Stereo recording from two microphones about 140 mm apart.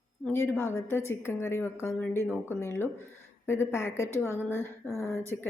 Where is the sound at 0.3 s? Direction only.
15° left (ahead or behind).